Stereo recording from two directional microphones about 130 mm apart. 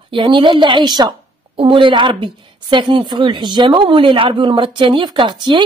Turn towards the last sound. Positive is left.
turn(degrees=-35)  # may be behind; listen again after turning